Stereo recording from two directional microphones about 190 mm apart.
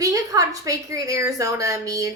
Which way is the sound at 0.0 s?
15° right (ahead or behind).